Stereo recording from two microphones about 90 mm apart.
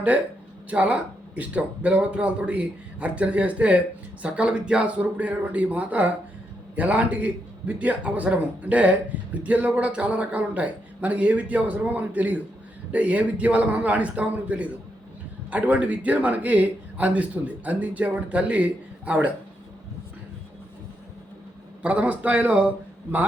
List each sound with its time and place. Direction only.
0.7 s a man's voice: 15° right (ahead or behind)
21.8 s a man's voice: 15° right (ahead or behind)